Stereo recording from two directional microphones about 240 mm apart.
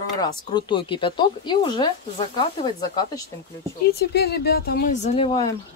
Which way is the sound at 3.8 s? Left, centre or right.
Left.